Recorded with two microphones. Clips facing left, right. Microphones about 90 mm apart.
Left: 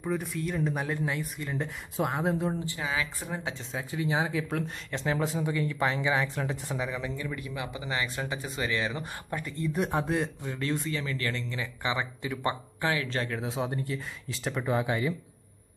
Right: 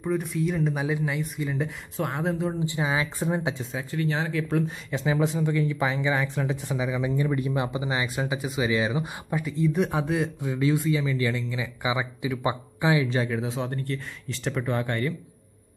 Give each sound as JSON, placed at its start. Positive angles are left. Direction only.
{"t": 0.0, "sound": "speech", "side_deg": 0}
{"t": 2.6, "sound": "speech", "side_deg": -20}
{"t": 3.9, "sound": "speech", "side_deg": 15}
{"t": 4.6, "sound": "speech", "side_deg": -5}
{"t": 7.0, "sound": "speech", "side_deg": -15}
{"t": 7.2, "sound": "speech", "side_deg": -30}
{"t": 7.8, "sound": "speech", "side_deg": -20}